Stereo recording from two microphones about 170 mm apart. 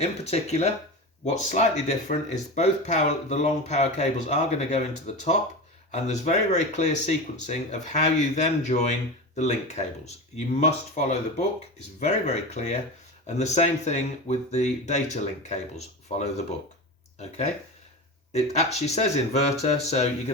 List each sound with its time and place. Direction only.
0.0 s speech: 40° left (ahead or behind)